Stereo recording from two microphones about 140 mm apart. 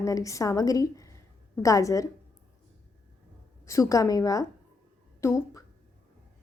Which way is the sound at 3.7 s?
20° left (ahead or behind).